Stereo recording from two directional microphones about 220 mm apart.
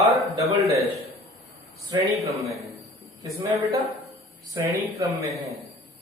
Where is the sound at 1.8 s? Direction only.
20° right (ahead or behind).